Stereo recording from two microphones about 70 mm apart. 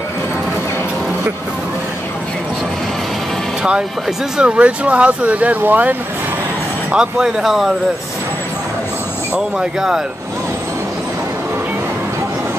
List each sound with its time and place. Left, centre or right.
4.4 s speech: centre
6.9 s speech: centre
9.3 s speech: centre